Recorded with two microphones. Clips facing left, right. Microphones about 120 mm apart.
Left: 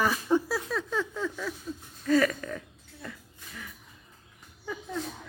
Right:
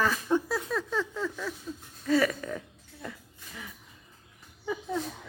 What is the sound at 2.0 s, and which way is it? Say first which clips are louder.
Speech: left 1 dB; 5° right (ahead or behind).